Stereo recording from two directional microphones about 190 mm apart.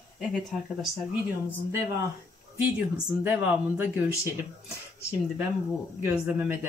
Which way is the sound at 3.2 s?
5° right (ahead or behind).